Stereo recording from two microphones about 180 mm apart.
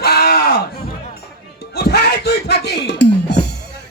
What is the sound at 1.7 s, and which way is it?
Music, 60° left (ahead or behind).